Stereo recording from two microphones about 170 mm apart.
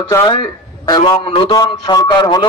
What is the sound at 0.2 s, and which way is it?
A man's voice, 25° left (ahead or behind).